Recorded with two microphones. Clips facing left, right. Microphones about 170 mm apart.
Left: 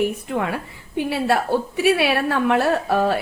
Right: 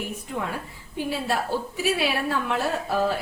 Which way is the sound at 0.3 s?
70° left (ahead or behind).